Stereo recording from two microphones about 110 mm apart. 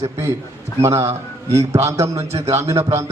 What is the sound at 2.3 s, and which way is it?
Speech, 70° right (ahead or behind).